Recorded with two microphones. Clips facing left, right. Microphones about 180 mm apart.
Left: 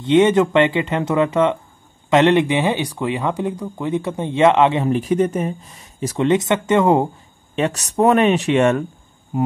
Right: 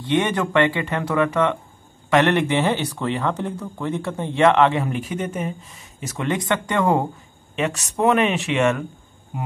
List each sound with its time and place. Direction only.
0.0 s speech: 20° left (ahead or behind)
4.8 s speech: 35° left (ahead or behind)
6.2 s speech: 20° left (ahead or behind)
7.5 s speech: 35° left (ahead or behind)
9.3 s mains hum: 40° left (ahead or behind)